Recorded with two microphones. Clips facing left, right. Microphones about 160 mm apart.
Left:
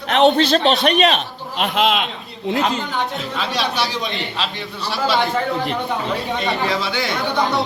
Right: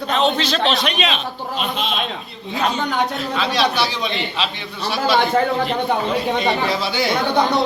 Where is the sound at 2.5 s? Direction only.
80° left.